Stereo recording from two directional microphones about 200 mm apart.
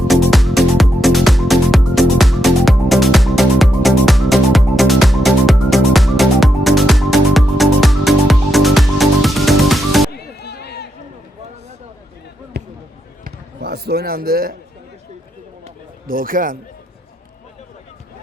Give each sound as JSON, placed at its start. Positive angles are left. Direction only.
{"t": 0.1, "sound": "music", "side_deg": 0}
{"t": 10.1, "sound": "music", "side_deg": 55}
{"t": 12.5, "sound": "basketball bounce", "side_deg": -55}
{"t": 16.0, "sound": "a man's voice", "side_deg": -45}